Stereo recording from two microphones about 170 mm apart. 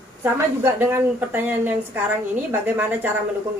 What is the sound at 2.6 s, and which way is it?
Speech, 10° right (ahead or behind).